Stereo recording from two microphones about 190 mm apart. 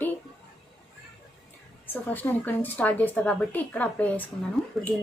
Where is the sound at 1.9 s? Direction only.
10° left (ahead or behind).